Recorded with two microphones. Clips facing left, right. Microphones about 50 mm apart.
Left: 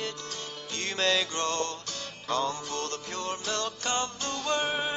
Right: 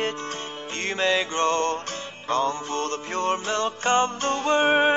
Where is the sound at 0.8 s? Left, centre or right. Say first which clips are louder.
Right 4 dB; right.